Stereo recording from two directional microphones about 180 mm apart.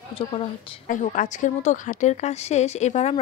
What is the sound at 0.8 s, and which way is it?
A woman's voice, 45° left (ahead or behind).